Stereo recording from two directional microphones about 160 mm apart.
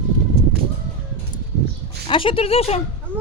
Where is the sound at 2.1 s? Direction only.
35° left (ahead or behind).